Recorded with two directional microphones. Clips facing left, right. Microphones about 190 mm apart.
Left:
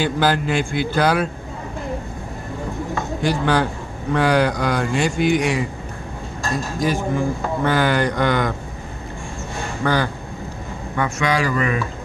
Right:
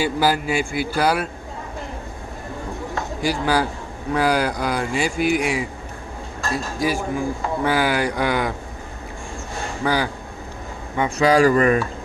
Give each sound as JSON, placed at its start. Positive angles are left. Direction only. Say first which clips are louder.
{"t": 0.0, "sound": "a man's voice", "louder": "left 1 dB", "side_deg": -5}
{"t": 3.2, "sound": "a man's voice", "louder": "left 1 dB", "side_deg": -5}
{"t": 9.8, "sound": "a man's voice", "louder": "left 1 dB", "side_deg": -10}
{"t": 11.1, "sound": "speech", "louder": "right 7 dB", "side_deg": -35}